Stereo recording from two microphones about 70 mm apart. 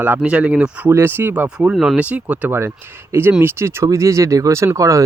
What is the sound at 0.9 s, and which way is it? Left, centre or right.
Speech, right.